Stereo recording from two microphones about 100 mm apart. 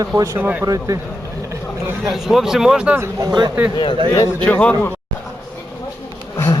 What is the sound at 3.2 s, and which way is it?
Speech, 45° right (ahead or behind).